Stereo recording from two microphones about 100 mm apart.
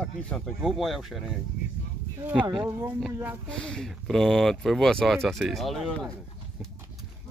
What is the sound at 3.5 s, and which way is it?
Speech, 5° left (ahead or behind).